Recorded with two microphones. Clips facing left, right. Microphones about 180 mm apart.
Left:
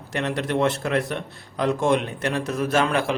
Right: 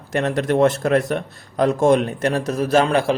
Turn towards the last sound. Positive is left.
turn(degrees=-35)  # may be behind; listen again after turning